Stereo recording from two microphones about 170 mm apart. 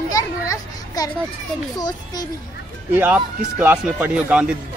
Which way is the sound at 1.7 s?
25° left (ahead or behind).